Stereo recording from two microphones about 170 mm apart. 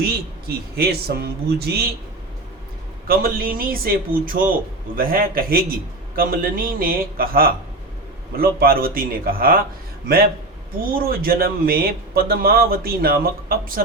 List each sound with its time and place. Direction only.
0.4 s a man's voice: 65° right (ahead or behind)
3.1 s a man's voice: 60° right (ahead or behind)
10.9 s a man's voice: 60° right (ahead or behind)